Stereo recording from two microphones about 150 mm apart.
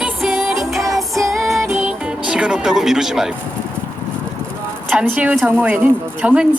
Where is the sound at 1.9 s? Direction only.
5° right (ahead or behind).